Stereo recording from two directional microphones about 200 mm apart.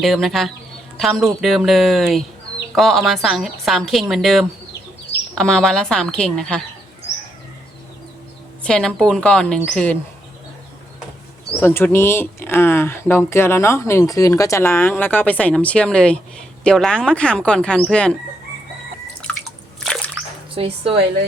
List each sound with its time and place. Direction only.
0.0 s a woman's voice: centre (ahead or behind)
8.6 s a woman's voice: 5° left (ahead or behind)
11.6 s a woman's voice: 10° left (ahead or behind)
19.3 s drip: 5° left (ahead or behind)
19.8 s a sound: 5° left (ahead or behind)
20.6 s a woman's voice: 30° right (ahead or behind)